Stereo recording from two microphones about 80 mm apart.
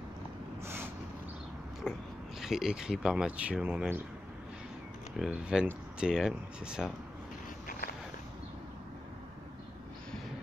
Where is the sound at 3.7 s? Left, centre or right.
Right.